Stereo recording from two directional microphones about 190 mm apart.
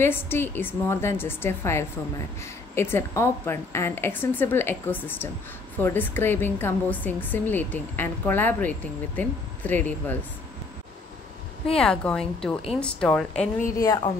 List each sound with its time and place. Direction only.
0.0 s a woman's voice: 10° left (ahead or behind)
11.7 s speech: 5° left (ahead or behind)
13.7 s speech: 20° left (ahead or behind)